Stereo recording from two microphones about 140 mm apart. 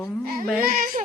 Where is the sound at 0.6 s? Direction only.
85° right.